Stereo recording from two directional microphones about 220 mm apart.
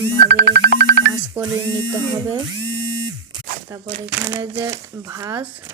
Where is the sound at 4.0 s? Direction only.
20° right (ahead or behind).